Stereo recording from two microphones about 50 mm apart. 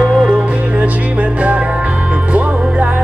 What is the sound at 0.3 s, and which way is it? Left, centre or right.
Music, right.